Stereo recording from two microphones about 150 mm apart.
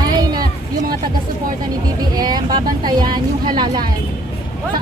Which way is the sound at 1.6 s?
25° right (ahead or behind).